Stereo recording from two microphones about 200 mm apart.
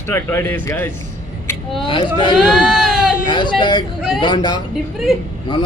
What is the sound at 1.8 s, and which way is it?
Speech, 25° left (ahead or behind).